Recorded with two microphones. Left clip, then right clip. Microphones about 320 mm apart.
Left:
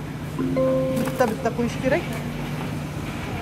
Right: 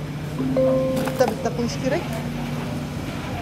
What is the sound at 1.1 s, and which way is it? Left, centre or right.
Speech, centre.